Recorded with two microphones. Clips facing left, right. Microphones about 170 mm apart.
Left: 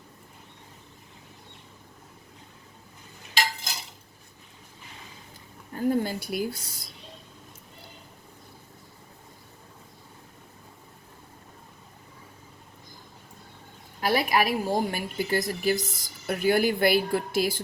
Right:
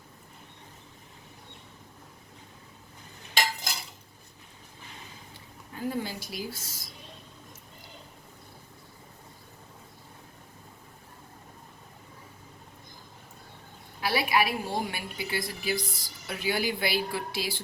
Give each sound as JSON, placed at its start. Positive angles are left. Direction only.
{"t": 5.7, "sound": "a woman's voice", "side_deg": 50}
{"t": 14.0, "sound": "a woman's voice", "side_deg": 45}